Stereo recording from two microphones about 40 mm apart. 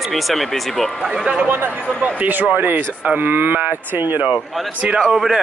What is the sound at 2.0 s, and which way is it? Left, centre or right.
Speech, right.